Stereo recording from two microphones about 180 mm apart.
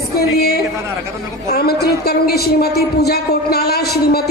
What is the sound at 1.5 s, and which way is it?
A man's voice, 60° left (ahead or behind).